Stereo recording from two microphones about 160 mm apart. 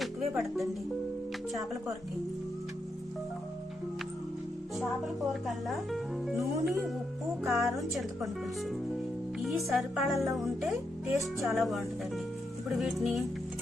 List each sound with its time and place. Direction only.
0.0 s music: centre (ahead or behind)
4.8 s speech: centre (ahead or behind)
7.4 s speech: 20° right (ahead or behind)
7.8 s speech: centre (ahead or behind)
9.4 s speech: centre (ahead or behind)